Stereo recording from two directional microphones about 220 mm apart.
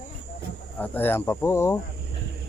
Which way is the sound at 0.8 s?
10° left (ahead or behind).